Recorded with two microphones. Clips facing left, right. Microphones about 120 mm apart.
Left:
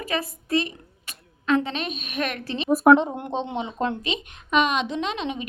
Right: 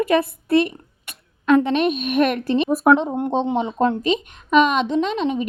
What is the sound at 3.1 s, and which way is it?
A woman's voice, 40° right (ahead or behind).